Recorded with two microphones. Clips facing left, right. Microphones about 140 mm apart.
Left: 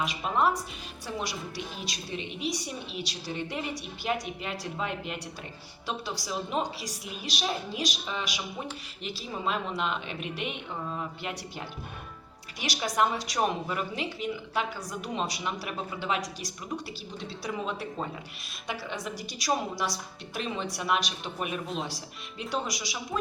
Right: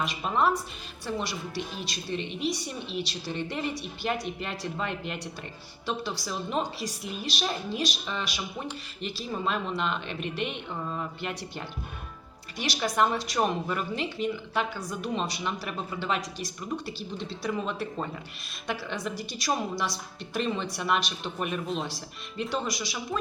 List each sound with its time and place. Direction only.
0.0 s a woman's voice: 5° left (ahead or behind)